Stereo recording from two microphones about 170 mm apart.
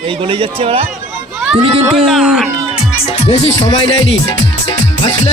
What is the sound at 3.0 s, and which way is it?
Music, 40° left (ahead or behind).